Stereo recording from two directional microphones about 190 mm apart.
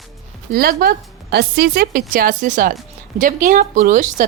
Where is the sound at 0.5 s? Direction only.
50° right (ahead or behind).